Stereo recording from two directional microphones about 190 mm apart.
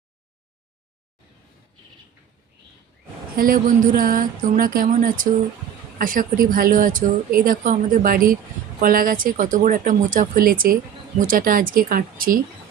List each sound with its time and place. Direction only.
3.3 s speech: 45° right (ahead or behind)